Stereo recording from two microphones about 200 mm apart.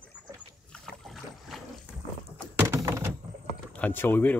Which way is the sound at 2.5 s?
15° right (ahead or behind).